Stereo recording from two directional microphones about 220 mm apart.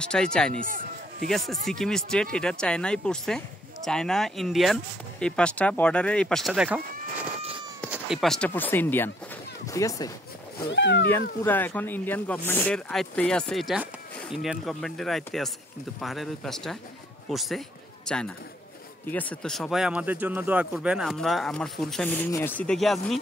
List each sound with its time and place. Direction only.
0.0 s speech: 5° left (ahead or behind)
1.7 s speech: centre (ahead or behind)
7.9 s speech: centre (ahead or behind); by 10.1 s 15° left (ahead or behind)
10.7 s speech: 55° left (ahead or behind)
11.4 s a man's voice: 10° left (ahead or behind)